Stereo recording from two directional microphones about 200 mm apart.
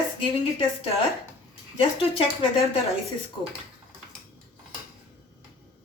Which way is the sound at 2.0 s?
25° left (ahead or behind).